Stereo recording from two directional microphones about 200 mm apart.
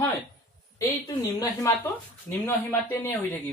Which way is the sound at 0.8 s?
15° left (ahead or behind).